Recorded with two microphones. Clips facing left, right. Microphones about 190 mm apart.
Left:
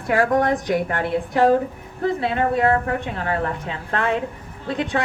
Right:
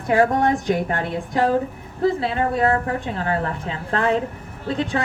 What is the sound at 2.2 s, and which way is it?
Speech, 35° right (ahead or behind).